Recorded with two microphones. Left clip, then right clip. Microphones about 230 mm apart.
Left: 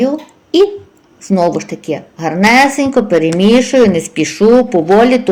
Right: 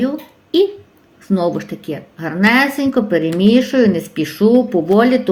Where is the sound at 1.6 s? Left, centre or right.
Centre.